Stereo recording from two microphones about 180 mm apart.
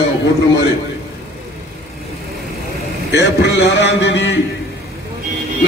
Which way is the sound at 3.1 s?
70° left (ahead or behind).